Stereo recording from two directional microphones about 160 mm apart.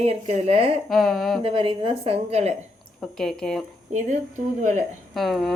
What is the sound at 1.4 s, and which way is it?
A woman's voice, 30° right (ahead or behind).